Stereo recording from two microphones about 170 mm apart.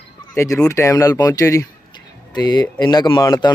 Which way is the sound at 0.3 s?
20° left (ahead or behind).